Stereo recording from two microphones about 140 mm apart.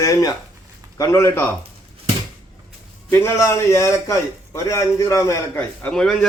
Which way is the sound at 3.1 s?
20° left (ahead or behind).